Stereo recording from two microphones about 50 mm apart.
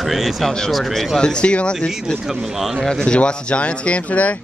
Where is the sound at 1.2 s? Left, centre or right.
Centre.